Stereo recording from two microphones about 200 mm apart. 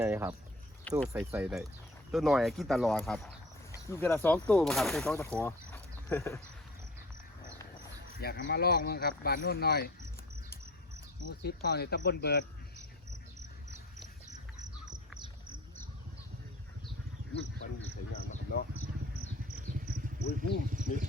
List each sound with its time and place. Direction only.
0.0 s speech: 15° right (ahead or behind)
0.9 s speech: 5° left (ahead or behind)
3.8 s speech: 15° left (ahead or behind)
5.1 s speech: 15° left (ahead or behind)
8.1 s speech: 50° left (ahead or behind)
11.4 s speech: 50° left (ahead or behind)
20.1 s speech: 55° left (ahead or behind)
20.7 s speech: 40° right (ahead or behind)